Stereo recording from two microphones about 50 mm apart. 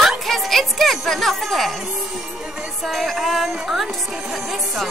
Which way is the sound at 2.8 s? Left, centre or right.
Centre.